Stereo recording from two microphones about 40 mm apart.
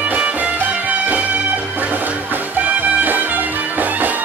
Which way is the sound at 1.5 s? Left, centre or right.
Right.